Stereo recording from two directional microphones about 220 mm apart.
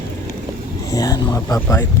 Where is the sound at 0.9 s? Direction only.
15° left (ahead or behind).